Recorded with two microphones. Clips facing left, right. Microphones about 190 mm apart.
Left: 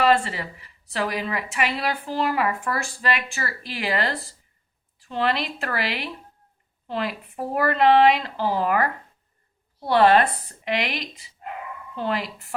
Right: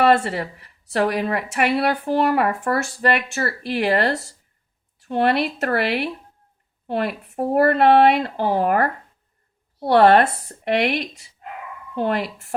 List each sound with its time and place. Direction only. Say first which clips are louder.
0.0 s a woman's voice: right 3 dB; 55° right (ahead or behind)
9.9 s speech: right 3 dB; 50° right (ahead or behind)